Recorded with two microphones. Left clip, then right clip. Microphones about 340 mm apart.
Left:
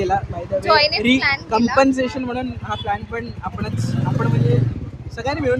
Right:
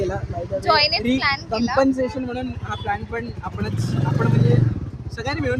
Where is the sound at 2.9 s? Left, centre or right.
Centre.